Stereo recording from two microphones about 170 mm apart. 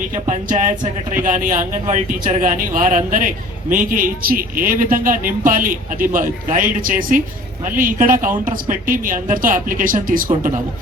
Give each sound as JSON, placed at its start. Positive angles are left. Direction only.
{"t": 0.3, "sound": "a man's voice", "side_deg": -50}